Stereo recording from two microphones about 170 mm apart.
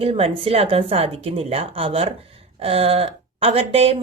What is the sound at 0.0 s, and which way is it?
Speech, 35° right (ahead or behind).